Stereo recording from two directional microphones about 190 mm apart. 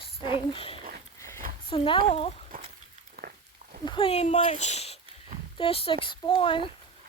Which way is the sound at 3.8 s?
25° left (ahead or behind).